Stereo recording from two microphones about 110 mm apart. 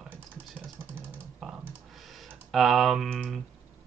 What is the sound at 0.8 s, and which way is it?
Typing, 20° right (ahead or behind).